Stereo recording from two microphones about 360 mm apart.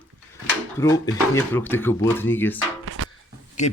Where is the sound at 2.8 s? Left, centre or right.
Right.